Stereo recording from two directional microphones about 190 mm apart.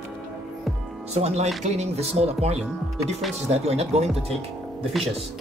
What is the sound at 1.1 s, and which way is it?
Speech, 35° right (ahead or behind).